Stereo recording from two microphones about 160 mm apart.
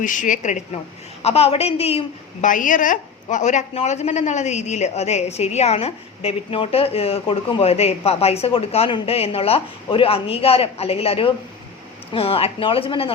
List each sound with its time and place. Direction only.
0.0 s a woman's voice: 55° left (ahead or behind); by 2.0 s 40° left (ahead or behind)
2.4 s a woman's voice: 55° left (ahead or behind); by 13.1 s 35° left (ahead or behind)